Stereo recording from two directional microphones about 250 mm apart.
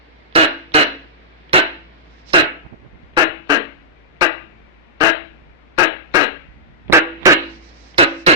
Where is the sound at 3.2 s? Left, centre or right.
Centre.